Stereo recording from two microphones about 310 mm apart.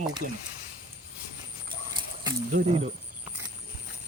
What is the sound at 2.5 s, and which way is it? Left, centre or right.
Speech, right.